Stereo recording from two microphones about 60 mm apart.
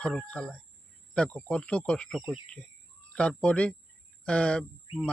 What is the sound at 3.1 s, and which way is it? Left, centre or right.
Speech, centre.